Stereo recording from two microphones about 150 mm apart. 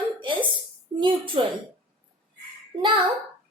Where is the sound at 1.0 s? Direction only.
35° right (ahead or behind).